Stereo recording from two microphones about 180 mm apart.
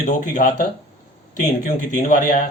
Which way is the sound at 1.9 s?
45° left (ahead or behind).